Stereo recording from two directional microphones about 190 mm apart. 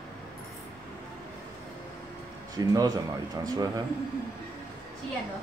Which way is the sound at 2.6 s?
20° right (ahead or behind).